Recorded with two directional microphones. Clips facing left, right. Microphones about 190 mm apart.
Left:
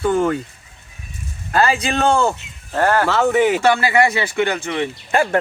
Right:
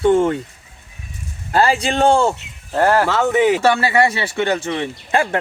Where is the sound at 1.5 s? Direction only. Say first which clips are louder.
Right 1 dB; 30° right (ahead or behind).